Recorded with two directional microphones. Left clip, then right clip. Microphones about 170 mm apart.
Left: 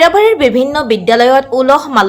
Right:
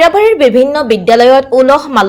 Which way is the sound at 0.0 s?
Centre (ahead or behind).